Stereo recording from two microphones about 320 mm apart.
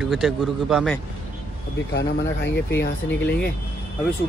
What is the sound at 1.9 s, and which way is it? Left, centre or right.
Speech, left.